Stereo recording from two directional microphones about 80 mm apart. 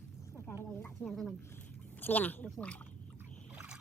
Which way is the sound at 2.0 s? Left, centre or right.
Left.